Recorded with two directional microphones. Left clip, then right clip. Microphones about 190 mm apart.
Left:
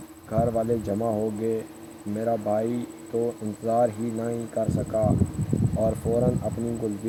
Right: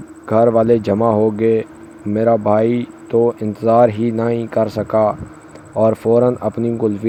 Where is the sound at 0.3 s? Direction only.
35° right (ahead or behind).